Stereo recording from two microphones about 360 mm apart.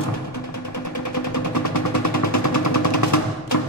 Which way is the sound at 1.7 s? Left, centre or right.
Left.